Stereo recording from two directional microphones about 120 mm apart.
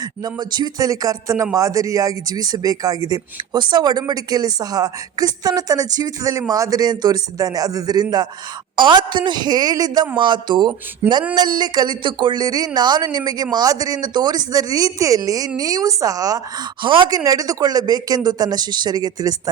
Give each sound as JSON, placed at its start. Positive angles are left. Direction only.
{"t": 0.0, "sound": "a woman's voice", "side_deg": -35}
{"t": 11.0, "sound": "a sound", "side_deg": -15}
{"t": 11.3, "sound": "a woman's voice", "side_deg": -35}
{"t": 16.8, "sound": "a woman's voice", "side_deg": -40}